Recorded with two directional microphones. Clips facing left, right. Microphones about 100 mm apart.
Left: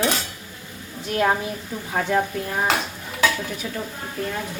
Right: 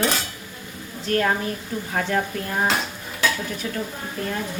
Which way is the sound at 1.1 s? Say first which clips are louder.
Even; 10° left (ahead or behind).